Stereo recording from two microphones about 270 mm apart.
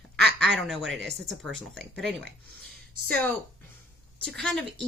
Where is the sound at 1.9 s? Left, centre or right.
Centre.